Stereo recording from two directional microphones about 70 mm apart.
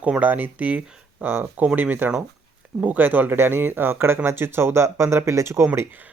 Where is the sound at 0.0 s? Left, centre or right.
Right.